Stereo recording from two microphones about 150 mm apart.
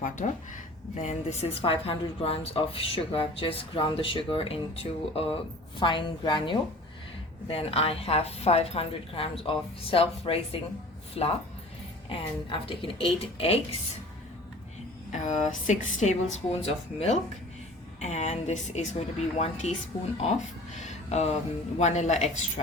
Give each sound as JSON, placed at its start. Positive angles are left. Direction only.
{"t": 0.0, "sound": "speech", "side_deg": 60}
{"t": 1.0, "sound": "a woman's voice", "side_deg": 45}
{"t": 15.1, "sound": "speech", "side_deg": 55}
{"t": 20.7, "sound": "speech", "side_deg": 50}